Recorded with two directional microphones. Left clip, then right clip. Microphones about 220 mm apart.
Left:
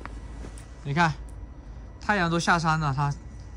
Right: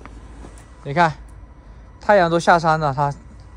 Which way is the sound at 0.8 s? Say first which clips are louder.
Right 7 dB; 15° left (ahead or behind).